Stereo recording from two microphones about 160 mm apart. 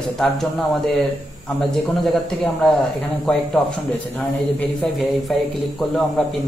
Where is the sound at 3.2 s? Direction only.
5° left (ahead or behind).